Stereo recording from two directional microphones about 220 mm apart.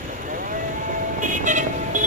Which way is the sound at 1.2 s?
35° right (ahead or behind).